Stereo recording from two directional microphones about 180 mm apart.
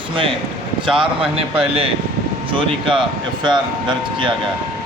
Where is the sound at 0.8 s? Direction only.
30° right (ahead or behind).